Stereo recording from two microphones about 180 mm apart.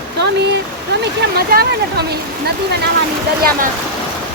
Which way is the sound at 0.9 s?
65° right (ahead or behind).